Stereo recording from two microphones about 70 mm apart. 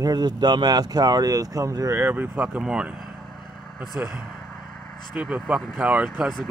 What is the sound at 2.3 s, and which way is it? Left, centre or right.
Speech, right.